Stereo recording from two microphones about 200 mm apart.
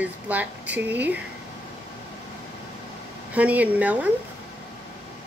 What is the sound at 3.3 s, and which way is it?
Speech, 5° right (ahead or behind).